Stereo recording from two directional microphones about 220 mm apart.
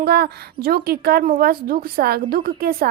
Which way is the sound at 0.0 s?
45° right (ahead or behind).